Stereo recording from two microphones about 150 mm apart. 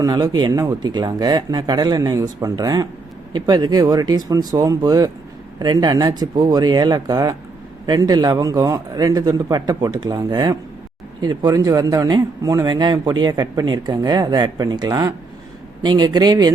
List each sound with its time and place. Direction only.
0.0 s a man's voice: 25° right (ahead or behind)